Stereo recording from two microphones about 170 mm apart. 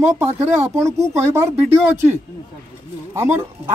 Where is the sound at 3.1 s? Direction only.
15° right (ahead or behind).